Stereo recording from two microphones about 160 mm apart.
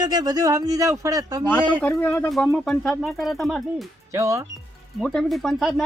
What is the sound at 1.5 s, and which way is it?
Speech, 10° left (ahead or behind).